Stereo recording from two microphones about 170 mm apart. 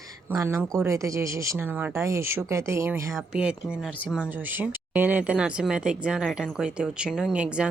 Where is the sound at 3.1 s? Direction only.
5° right (ahead or behind).